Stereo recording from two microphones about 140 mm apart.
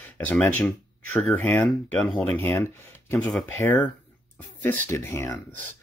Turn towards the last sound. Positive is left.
turn(degrees=20)  # may be behind; listen again after turning